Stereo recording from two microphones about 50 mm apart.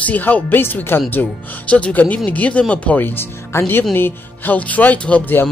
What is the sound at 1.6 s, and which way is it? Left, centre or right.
Speech, left.